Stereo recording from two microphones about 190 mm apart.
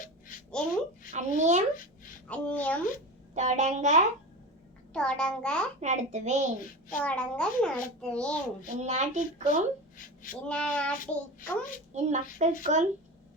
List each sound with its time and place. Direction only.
1.1 s speech: 40° right (ahead or behind)
2.2 s a woman's voice: 5° left (ahead or behind)
3.3 s speech: 40° right (ahead or behind)
4.9 s a child's voice: 5° left (ahead or behind)
5.8 s speech: 40° right (ahead or behind)
6.9 s a child's voice: 5° left (ahead or behind)
8.6 s speech: 35° right (ahead or behind)
10.4 s a child's voice: 5° left (ahead or behind)
11.0 s a child's voice: 45° left (ahead or behind)
11.9 s speech: 40° right (ahead or behind)